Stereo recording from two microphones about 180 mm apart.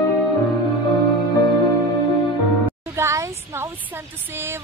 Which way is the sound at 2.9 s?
15° right (ahead or behind).